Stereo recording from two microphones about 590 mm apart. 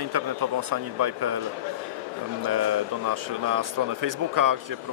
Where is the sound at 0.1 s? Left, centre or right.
Right.